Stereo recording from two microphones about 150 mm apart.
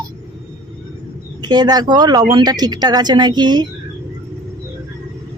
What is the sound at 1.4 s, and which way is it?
Speech, 30° right (ahead or behind).